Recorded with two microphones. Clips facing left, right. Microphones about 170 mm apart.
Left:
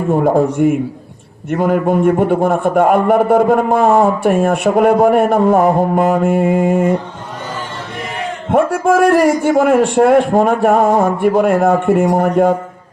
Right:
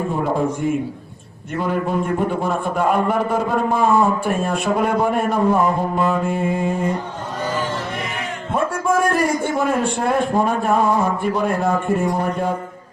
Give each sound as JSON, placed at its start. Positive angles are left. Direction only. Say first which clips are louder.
{"t": 0.1, "sound": "a man's voice", "louder": "left 12 dB", "side_deg": 50}
{"t": 1.5, "sound": "a man's voice", "louder": "left 7 dB", "side_deg": 50}
{"t": 8.5, "sound": "a man's voice", "louder": "left 7 dB", "side_deg": 70}